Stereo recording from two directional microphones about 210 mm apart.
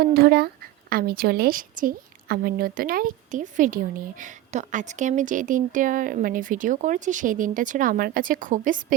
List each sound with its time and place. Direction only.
0.0 s speech: 50° right (ahead or behind)